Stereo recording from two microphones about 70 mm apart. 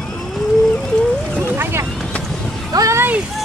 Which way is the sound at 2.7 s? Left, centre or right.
Right.